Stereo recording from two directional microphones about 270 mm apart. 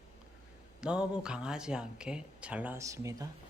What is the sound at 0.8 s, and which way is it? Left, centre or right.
Speech, centre.